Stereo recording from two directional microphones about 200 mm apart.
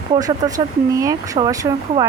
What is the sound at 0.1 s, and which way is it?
Speech, 20° right (ahead or behind).